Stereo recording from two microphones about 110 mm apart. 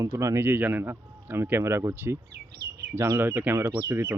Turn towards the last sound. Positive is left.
turn(degrees=-20)  # may be behind; listen again after turning